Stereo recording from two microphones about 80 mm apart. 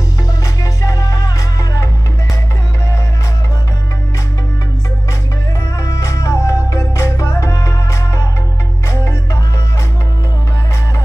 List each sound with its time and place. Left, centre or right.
0.8 s music: left
5.8 s music: left